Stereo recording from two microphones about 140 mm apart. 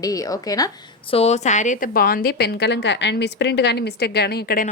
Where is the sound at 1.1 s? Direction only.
50° left (ahead or behind); by 2.6 s 90° left.